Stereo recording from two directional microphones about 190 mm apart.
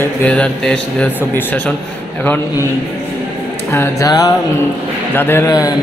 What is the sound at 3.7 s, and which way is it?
Speech, 15° left (ahead or behind).